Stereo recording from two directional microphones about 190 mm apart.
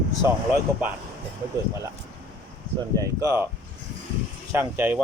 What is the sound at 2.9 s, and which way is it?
Speech, 15° right (ahead or behind).